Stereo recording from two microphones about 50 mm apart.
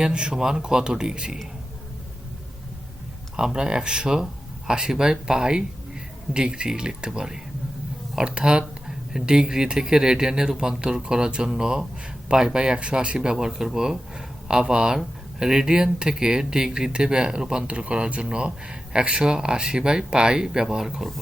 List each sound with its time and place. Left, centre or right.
0.0 s speech: centre
3.3 s speech: centre